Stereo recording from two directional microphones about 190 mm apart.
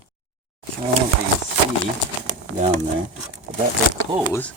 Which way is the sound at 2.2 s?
40° right (ahead or behind).